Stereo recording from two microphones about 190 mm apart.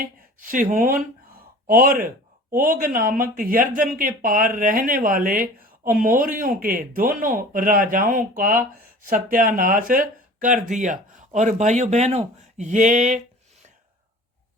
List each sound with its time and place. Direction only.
0.3 s speech: 45° right (ahead or behind)